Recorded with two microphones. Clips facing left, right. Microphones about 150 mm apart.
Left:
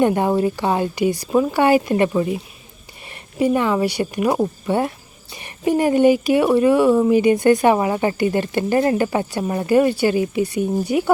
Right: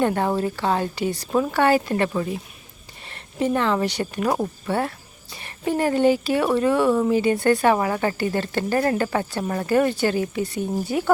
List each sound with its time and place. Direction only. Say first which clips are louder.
0.0 s speech: left 4 dB; 15° left (ahead or behind)